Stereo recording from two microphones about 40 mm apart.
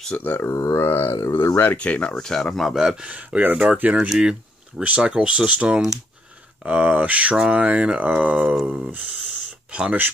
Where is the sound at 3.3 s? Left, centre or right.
Right.